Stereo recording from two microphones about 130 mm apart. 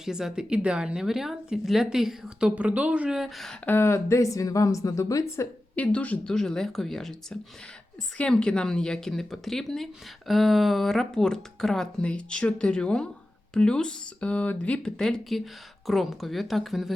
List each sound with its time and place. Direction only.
0.0 s speech: 5° right (ahead or behind)
3.7 s a woman's voice: 20° left (ahead or behind)
5.7 s speech: 10° left (ahead or behind)